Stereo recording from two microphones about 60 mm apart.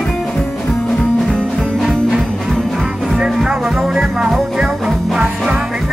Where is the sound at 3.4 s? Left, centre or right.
Centre.